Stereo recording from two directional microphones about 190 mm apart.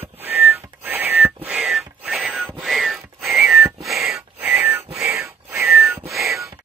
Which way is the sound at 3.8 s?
Centre (ahead or behind).